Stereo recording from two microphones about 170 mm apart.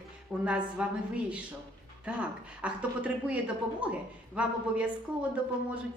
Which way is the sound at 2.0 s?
5° right (ahead or behind).